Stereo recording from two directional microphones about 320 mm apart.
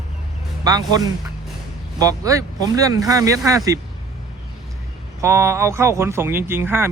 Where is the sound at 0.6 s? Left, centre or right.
Centre.